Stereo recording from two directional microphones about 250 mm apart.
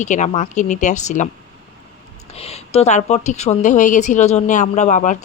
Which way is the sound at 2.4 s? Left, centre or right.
Left.